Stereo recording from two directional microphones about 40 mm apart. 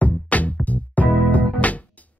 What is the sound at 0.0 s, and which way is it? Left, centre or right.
Music, left.